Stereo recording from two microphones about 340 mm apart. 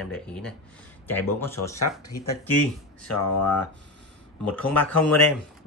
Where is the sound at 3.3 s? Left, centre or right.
Left.